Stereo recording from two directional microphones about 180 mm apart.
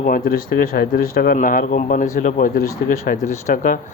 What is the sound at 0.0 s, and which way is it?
Speech, 50° left (ahead or behind).